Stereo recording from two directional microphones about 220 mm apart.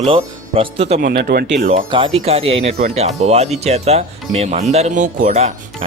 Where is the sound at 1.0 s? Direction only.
40° right (ahead or behind).